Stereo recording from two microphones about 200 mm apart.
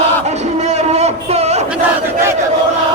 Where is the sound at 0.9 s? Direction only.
30° right (ahead or behind).